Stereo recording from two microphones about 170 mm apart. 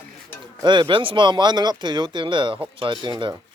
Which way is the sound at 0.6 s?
25° right (ahead or behind).